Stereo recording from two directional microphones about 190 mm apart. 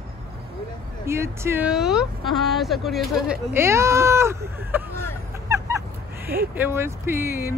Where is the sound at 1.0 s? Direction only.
15° right (ahead or behind).